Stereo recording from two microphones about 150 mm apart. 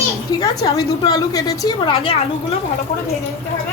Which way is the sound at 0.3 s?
25° left (ahead or behind).